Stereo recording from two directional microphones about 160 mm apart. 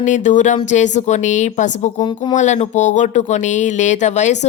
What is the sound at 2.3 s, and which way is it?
Speech, 45° left (ahead or behind).